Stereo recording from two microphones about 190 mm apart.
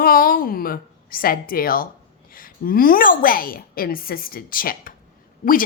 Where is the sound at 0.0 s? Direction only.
50° left (ahead or behind).